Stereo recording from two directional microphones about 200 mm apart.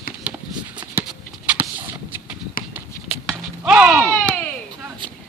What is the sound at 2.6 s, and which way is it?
Run, 45° left (ahead or behind).